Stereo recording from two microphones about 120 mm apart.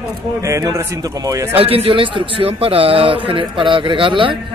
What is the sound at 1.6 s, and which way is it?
A man's voice, 50° right (ahead or behind).